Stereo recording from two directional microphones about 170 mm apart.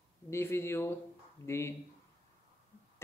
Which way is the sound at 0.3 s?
15° left (ahead or behind).